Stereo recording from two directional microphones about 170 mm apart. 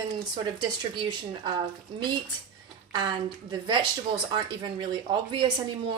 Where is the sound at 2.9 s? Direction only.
25° right (ahead or behind).